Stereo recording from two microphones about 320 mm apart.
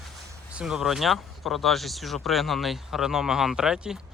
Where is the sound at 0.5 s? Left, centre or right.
Centre.